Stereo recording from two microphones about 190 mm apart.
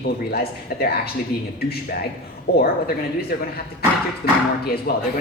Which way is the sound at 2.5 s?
55° left (ahead or behind).